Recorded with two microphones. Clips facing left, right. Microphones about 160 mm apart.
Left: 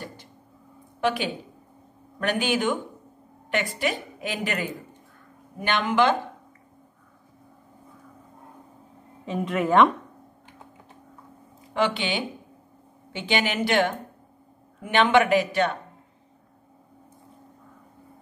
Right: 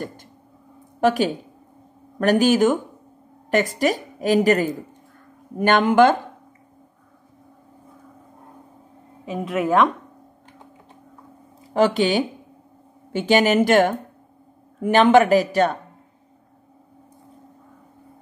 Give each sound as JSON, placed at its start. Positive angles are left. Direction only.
{"t": 1.0, "sound": "a woman's voice", "side_deg": -40}
{"t": 9.2, "sound": "a woman's voice", "side_deg": -5}
{"t": 11.7, "sound": "a woman's voice", "side_deg": -40}